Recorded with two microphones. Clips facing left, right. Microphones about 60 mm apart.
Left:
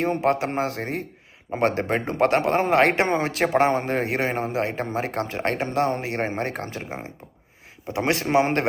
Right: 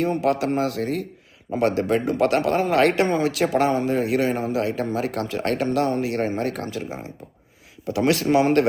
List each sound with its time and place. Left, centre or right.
0.0 s a man's voice: left